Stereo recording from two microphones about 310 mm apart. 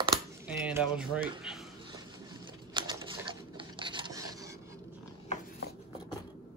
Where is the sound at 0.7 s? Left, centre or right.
Centre.